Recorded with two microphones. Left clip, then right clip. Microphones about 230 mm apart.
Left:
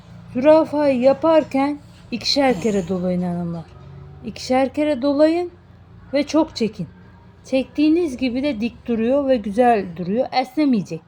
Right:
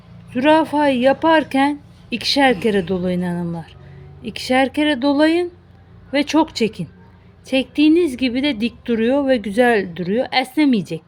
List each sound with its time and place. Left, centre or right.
0.3 s a woman's voice: right